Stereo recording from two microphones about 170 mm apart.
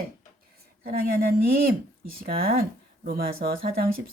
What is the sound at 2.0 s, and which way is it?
Speech, 60° right (ahead or behind).